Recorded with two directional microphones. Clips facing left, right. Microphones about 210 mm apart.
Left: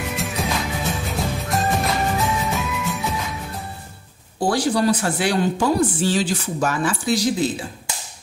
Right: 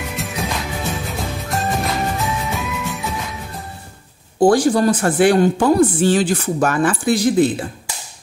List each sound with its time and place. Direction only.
0.2 s music: centre (ahead or behind)
4.4 s speech: 50° right (ahead or behind)